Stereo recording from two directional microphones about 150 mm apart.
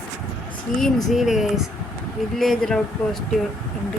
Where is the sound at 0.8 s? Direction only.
Centre (ahead or behind).